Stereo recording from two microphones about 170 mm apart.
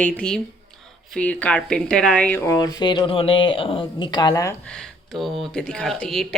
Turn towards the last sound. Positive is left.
turn(degrees=5)  # may be behind; listen again after turning